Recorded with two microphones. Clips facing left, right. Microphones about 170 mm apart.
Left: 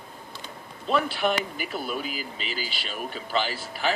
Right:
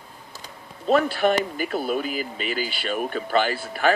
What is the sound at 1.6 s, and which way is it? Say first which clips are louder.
Speech: right 6 dB; 45° right (ahead or behind).